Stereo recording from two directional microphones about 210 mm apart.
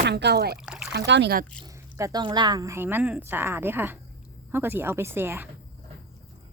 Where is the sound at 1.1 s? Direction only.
55° right (ahead or behind).